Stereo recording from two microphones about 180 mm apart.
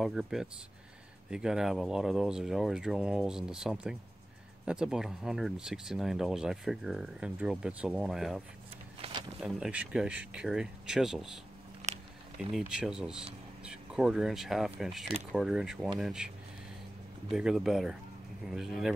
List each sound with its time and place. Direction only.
0.0 s speech: centre (ahead or behind)
9.0 s a sound: 35° right (ahead or behind)
9.4 s speech: 5° right (ahead or behind)
11.9 s a sound: 40° right (ahead or behind)
12.4 s speech: centre (ahead or behind)
17.3 s speech: 5° right (ahead or behind)